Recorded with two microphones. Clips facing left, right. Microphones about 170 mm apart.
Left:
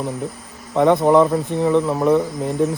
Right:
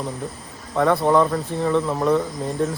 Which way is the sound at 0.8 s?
20° left (ahead or behind).